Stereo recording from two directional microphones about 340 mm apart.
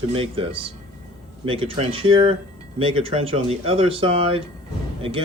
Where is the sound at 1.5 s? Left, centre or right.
Centre.